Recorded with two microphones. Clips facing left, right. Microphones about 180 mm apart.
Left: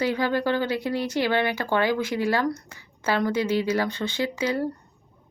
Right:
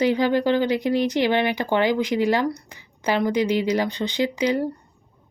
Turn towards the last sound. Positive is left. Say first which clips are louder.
# right 4 dB
turn(degrees=-15)  # may be behind; listen again after turning